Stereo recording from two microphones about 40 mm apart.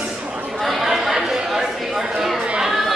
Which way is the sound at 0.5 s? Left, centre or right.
Centre.